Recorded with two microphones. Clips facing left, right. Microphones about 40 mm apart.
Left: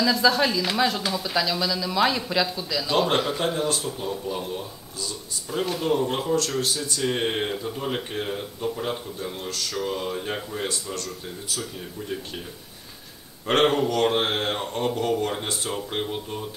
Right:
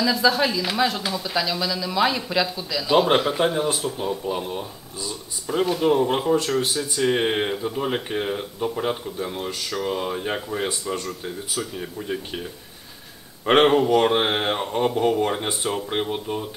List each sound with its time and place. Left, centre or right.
0.0 s speech: centre
13.5 s speech: centre